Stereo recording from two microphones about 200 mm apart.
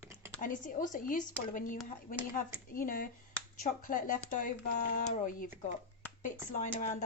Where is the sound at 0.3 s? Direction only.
40° left (ahead or behind).